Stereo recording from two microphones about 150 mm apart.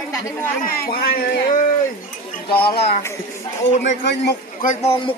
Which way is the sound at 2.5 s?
90° left.